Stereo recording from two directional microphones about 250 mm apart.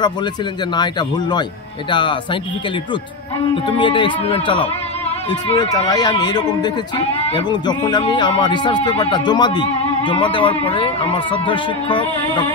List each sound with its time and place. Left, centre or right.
0.7 s speech: centre
3.6 s speech: centre